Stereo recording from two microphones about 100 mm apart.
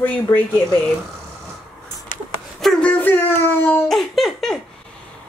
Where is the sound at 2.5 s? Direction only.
5° left (ahead or behind).